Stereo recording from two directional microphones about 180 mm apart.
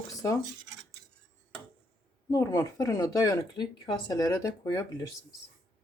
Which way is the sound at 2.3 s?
20° left (ahead or behind).